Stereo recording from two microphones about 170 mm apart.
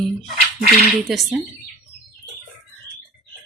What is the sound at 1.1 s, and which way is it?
Speech, centre (ahead or behind).